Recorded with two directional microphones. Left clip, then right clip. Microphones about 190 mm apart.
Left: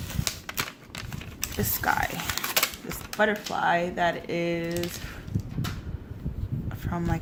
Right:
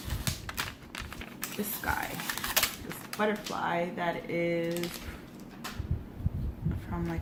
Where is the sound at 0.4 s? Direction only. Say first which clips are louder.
Left 4 dB; 15° left (ahead or behind).